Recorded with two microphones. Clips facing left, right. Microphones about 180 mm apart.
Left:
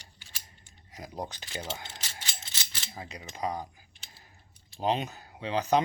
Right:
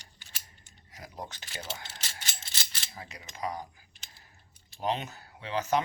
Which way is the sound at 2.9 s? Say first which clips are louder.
Left 4 dB; 25° left (ahead or behind).